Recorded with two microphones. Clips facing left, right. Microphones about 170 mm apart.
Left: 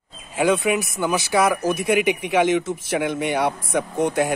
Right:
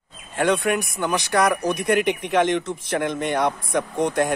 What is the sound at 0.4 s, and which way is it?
Speech, centre (ahead or behind).